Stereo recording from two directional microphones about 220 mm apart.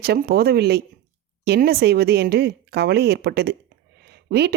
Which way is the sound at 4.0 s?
50° right (ahead or behind).